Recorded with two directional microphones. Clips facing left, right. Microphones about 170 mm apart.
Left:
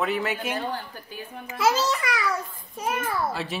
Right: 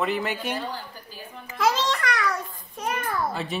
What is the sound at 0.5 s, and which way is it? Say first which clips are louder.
Speech: left 2 dB; 55° left (ahead or behind).